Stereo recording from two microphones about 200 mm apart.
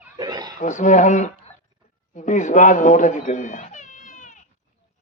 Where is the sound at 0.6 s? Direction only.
40° left (ahead or behind).